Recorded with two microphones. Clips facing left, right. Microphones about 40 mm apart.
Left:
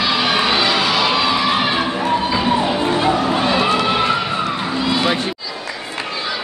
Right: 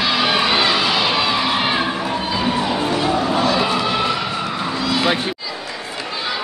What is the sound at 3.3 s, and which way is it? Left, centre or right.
Crowd, left.